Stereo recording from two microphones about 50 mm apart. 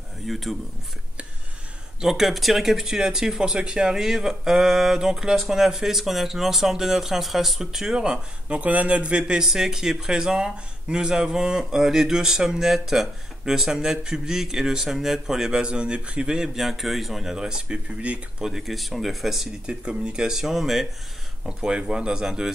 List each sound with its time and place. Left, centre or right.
0.3 s speech: centre
2.0 s speech: centre
16.5 s speech: centre; by 18.2 s right
18.4 s speech: centre
19.6 s speech: right; by 20.8 s centre
21.5 s speech: centre